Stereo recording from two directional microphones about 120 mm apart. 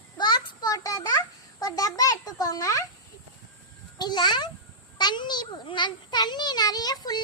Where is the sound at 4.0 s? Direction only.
35° left (ahead or behind).